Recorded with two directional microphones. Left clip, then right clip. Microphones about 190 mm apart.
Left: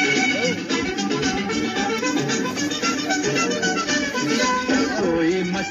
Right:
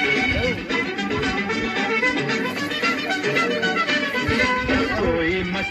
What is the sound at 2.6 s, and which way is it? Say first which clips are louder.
Music: right 1 dB; 40° left (ahead or behind).